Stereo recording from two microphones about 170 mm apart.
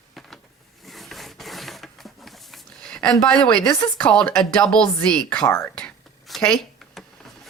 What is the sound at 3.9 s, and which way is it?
Speech, 5° left (ahead or behind).